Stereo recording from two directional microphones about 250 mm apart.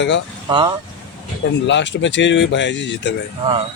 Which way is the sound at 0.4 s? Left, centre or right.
Centre.